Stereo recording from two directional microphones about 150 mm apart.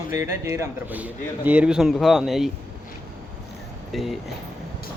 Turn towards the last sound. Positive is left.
turn(degrees=0)  # may be behind; listen again after turning